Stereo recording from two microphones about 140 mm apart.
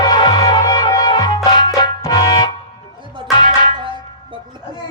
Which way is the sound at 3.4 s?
30° left (ahead or behind).